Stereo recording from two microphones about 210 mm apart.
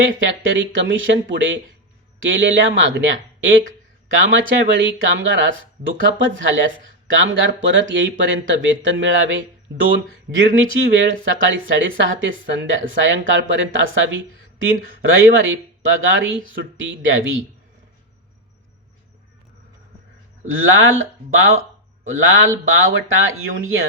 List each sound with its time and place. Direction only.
0.2 s speech: 65° right (ahead or behind)
4.1 s speech: 65° right (ahead or behind)
20.5 s speech: 70° right (ahead or behind)